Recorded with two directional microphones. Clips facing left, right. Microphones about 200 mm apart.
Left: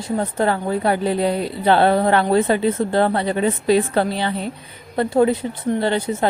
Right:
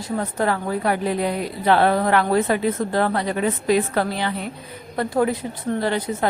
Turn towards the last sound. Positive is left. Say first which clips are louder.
# left 3 dB
turn(degrees=25)  # may be behind; listen again after turning